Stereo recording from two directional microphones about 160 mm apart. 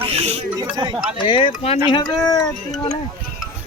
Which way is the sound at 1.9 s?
25° left (ahead or behind).